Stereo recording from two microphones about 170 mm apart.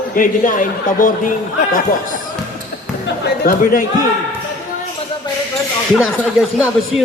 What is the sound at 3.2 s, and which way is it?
Speech, 60° left (ahead or behind).